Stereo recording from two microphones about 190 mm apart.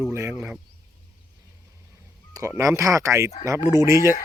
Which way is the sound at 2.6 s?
15° right (ahead or behind).